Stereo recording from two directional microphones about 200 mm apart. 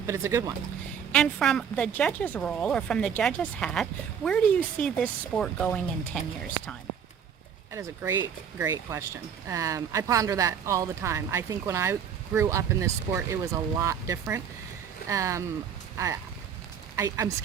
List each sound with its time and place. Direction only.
0.1 s speech: 15° right (ahead or behind)
1.1 s a woman's voice: 5° left (ahead or behind)
7.7 s speech: 15° right (ahead or behind)
17.0 s speech: 15° right (ahead or behind)